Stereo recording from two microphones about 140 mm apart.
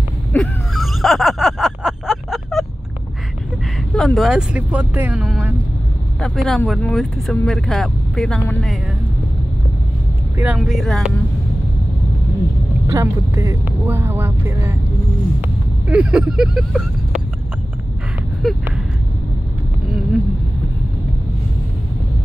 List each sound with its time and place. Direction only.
0.3 s a sound: centre (ahead or behind)
3.9 s speech: centre (ahead or behind)
10.3 s speech: 10° right (ahead or behind)
12.8 s speech: 20° right (ahead or behind)
15.4 s vehicle: 10° right (ahead or behind)
18.4 s speech: centre (ahead or behind)